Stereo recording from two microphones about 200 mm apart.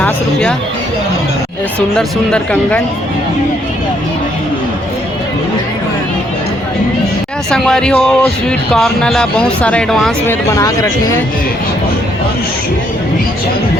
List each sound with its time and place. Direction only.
2.0 s speech: 5° left (ahead or behind)
7.5 s speech: 5° left (ahead or behind)
10.5 s speech: 15° left (ahead or behind)